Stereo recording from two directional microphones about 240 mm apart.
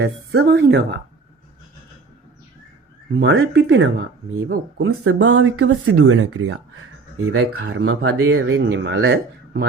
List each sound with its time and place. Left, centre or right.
0.0 s speech: right
3.2 s speech: right
4.8 s speech: right